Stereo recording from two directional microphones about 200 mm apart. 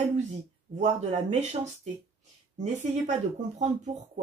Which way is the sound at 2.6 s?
35° right (ahead or behind).